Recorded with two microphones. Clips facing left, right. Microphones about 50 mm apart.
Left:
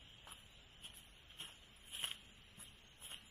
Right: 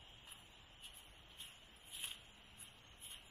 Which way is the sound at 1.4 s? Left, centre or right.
Left.